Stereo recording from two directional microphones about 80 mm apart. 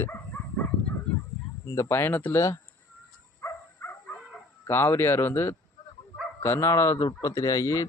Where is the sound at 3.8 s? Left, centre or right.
Left.